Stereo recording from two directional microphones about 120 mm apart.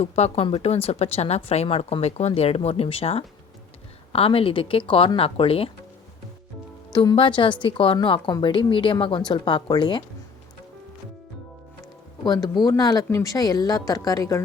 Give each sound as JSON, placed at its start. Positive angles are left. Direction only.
{"t": 0.0, "sound": "speech", "side_deg": 55}
{"t": 6.9, "sound": "speech", "side_deg": 30}
{"t": 7.2, "sound": "speech", "side_deg": 45}
{"t": 12.2, "sound": "speech", "side_deg": 35}